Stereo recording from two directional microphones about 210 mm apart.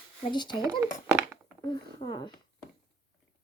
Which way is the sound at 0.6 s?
15° right (ahead or behind).